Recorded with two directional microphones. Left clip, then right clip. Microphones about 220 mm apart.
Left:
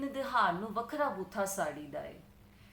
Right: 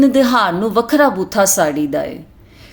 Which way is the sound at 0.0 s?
45° right (ahead or behind).